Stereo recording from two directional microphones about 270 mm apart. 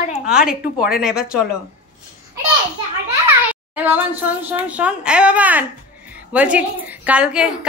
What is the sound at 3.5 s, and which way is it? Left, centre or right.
Speech, centre.